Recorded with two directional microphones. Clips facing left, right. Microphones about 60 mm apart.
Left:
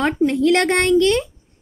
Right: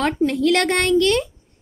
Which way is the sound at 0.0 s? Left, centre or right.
Left.